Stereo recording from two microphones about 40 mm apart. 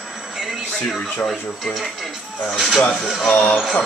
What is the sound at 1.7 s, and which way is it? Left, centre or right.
Speech, centre.